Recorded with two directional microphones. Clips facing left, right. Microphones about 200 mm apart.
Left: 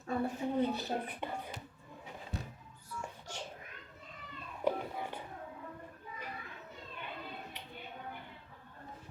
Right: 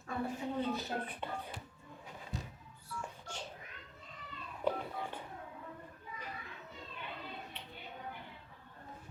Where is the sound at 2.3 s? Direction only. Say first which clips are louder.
Left 1 dB; 60° left (ahead or behind).